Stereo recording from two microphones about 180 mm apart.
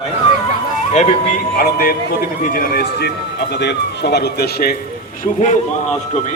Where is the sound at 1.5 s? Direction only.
55° left (ahead or behind).